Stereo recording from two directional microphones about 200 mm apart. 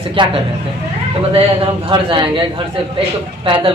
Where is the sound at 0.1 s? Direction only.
25° right (ahead or behind).